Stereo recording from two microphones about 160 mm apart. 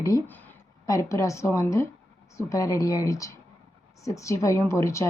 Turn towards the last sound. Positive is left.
turn(degrees=20)  # may be behind; listen again after turning